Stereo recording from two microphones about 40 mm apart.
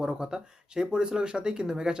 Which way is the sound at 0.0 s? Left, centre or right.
Centre.